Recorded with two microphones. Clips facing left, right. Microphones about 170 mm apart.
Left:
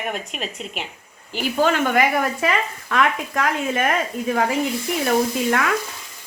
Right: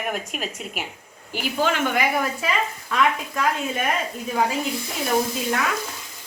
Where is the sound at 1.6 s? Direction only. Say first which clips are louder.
Left 4 dB; 45° left (ahead or behind); by 3.9 s 70° left (ahead or behind).